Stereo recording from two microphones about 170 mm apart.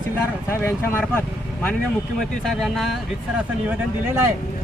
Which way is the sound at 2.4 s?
Centre (ahead or behind).